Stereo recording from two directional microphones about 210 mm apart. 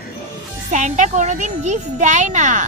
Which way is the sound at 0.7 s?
35° right (ahead or behind).